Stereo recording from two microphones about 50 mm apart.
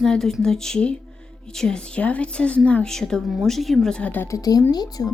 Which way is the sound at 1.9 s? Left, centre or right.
Left.